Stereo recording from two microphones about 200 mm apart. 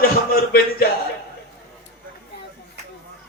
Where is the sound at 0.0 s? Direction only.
50° left (ahead or behind).